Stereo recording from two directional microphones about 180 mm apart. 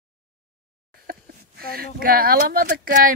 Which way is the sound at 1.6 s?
55° right (ahead or behind).